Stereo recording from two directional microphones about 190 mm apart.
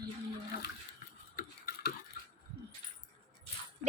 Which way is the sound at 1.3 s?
50° left (ahead or behind).